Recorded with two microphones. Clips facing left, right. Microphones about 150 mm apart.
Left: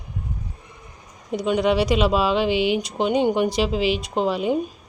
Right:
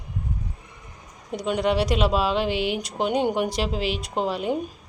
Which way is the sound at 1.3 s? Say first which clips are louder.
Left 3 dB; centre (ahead or behind).